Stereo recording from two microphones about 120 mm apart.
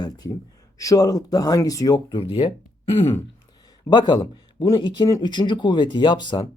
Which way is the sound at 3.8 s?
35° left (ahead or behind).